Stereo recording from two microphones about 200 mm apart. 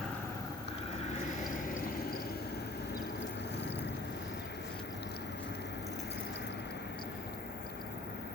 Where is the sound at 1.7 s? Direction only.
50° left (ahead or behind).